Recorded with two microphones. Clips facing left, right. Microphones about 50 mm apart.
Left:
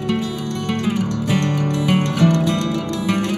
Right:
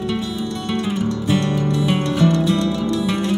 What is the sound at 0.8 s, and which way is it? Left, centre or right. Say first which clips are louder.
Music: even; left.